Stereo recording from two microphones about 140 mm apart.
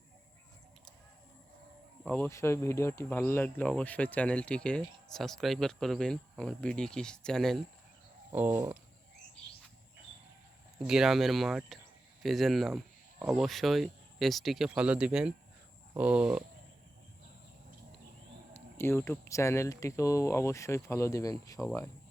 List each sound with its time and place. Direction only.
2.0 s speech: 15° left (ahead or behind)
8.3 s speech: 20° right (ahead or behind)
10.8 s speech: 5° right (ahead or behind)
18.5 s speech: 15° left (ahead or behind)